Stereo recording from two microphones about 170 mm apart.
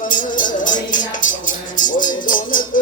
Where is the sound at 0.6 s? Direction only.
50° left (ahead or behind).